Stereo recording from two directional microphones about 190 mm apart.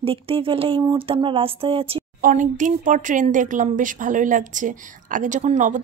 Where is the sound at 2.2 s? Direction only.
45° right (ahead or behind).